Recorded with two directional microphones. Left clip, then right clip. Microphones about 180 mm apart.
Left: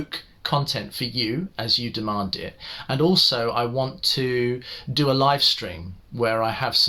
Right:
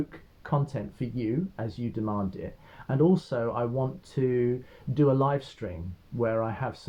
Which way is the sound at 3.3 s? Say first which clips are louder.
Left 6 dB; 15° left (ahead or behind).